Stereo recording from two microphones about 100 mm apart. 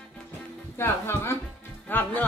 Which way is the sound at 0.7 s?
25° left (ahead or behind).